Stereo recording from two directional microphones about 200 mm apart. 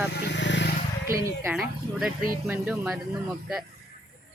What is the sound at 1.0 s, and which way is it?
Speech, 15° right (ahead or behind).